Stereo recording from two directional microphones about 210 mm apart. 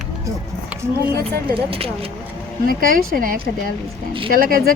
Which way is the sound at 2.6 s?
45° right (ahead or behind).